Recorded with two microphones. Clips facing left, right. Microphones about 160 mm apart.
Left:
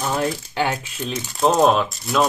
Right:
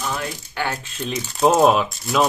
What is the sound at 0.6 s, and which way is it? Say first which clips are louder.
Speech: left 3 dB; 20° left (ahead or behind).